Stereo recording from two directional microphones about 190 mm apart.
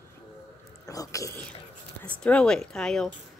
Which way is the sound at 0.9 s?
15° left (ahead or behind).